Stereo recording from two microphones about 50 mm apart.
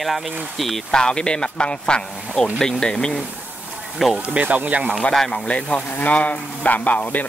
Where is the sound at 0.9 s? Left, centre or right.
Centre.